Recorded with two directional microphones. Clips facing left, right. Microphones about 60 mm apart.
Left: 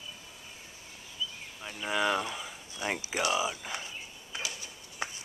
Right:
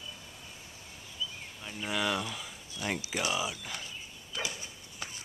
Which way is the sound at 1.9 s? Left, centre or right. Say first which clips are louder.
Left 3 dB; centre.